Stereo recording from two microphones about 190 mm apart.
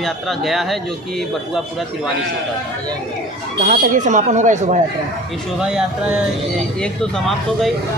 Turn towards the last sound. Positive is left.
turn(degrees=0)  # may be behind; listen again after turning